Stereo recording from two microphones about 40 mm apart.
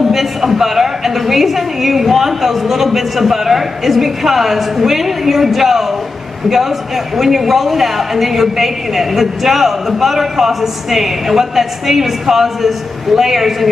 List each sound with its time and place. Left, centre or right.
0.1 s speech: centre
7.2 s speech: centre